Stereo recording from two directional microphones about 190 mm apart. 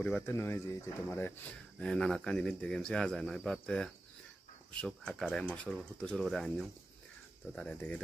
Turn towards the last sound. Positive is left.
turn(degrees=5)  # may be behind; listen again after turning